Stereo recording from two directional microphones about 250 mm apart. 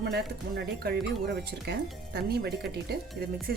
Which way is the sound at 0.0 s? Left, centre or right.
Right.